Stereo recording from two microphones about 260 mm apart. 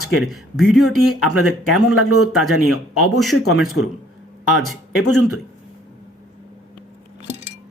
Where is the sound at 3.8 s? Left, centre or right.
Left.